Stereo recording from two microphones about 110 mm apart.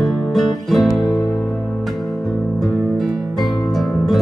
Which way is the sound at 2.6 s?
Centre (ahead or behind).